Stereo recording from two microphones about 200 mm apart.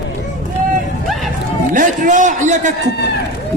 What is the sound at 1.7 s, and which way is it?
A man's voice, 40° right (ahead or behind).